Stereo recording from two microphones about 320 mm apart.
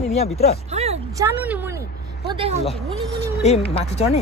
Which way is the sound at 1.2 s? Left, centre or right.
Centre.